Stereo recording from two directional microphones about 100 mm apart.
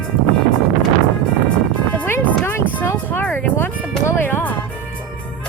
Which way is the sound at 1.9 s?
15° left (ahead or behind).